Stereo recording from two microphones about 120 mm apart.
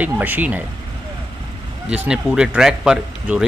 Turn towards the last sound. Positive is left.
turn(degrees=-10)  # may be behind; listen again after turning